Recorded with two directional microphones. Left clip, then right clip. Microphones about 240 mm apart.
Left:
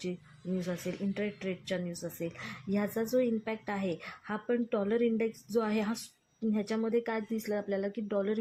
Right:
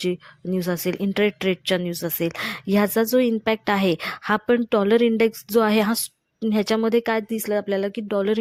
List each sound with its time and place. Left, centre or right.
0.6 s speech: right